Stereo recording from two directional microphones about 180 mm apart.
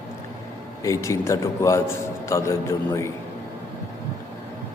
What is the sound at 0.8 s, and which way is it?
A man's voice, 15° left (ahead or behind).